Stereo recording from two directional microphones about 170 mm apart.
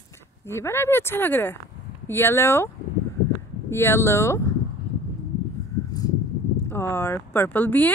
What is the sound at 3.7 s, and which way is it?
Speech, 15° left (ahead or behind).